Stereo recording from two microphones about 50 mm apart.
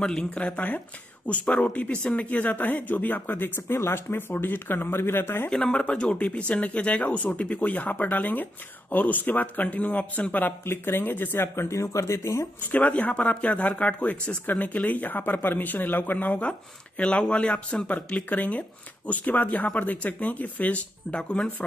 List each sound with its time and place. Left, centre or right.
0.0 s speech: centre; by 3.7 s left
3.7 s speech: left
5.5 s speech: centre
10.6 s speech: left
11.6 s speech: left
12.2 s speech: left
12.6 s speech: left
14.4 s speech: left
16.3 s speech: left
17.8 s speech: left